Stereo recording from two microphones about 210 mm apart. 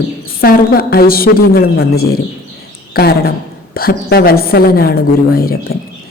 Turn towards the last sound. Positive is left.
turn(degrees=45)  # may be behind; listen again after turning